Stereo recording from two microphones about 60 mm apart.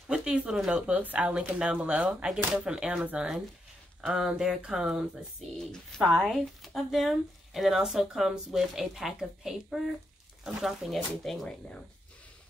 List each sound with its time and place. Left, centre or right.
0.1 s a sound: centre
0.7 s speech: centre
5.6 s speech: centre